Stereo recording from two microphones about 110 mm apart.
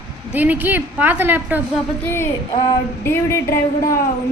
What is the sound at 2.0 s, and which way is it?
A woman's voice, 20° left (ahead or behind).